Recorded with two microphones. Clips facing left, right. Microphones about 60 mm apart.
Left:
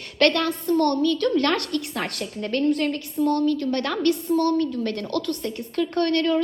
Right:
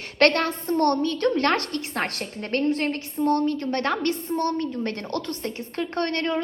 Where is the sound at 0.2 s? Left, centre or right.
Right.